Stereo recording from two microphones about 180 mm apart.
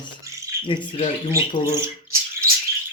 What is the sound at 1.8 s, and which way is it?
Squawk, 15° right (ahead or behind).